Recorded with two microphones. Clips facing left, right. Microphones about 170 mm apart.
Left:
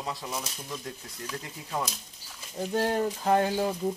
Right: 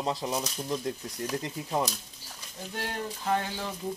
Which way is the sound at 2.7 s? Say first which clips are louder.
Left 9 dB; 35° left (ahead or behind).